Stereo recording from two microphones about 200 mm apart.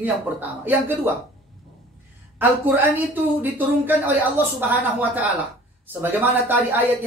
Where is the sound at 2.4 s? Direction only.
10° right (ahead or behind).